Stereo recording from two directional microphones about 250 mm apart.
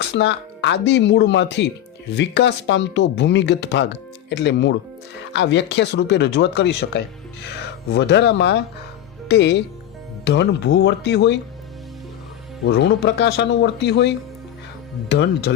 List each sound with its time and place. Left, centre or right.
0.0 s speech: left
12.6 s speech: left